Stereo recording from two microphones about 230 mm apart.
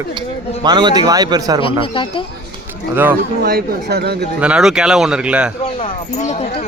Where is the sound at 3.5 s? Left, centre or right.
Right.